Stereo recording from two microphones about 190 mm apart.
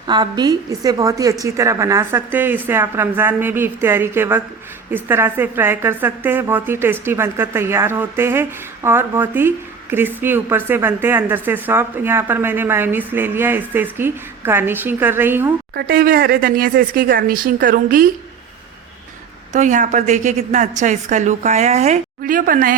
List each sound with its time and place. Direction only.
0.1 s a woman's voice: 20° right (ahead or behind)
15.7 s speech: 50° right (ahead or behind)
19.5 s a woman's voice: 40° right (ahead or behind)